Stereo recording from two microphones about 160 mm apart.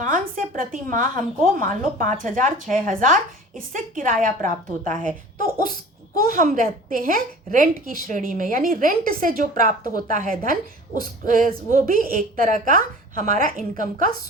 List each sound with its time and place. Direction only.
0.0 s a woman's voice: 60° right (ahead or behind)
4.9 s speech: 5° left (ahead or behind)
6.2 s a woman's voice: 60° right (ahead or behind)